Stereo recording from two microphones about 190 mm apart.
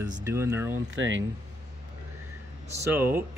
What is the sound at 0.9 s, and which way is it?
Speech, 85° right.